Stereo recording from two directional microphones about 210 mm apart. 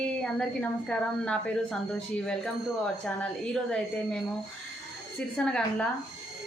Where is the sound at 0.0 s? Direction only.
5° left (ahead or behind).